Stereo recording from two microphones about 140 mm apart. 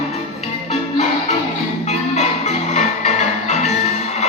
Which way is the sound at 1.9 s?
50° left (ahead or behind).